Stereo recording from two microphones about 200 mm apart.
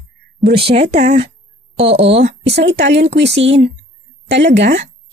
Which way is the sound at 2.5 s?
60° right (ahead or behind).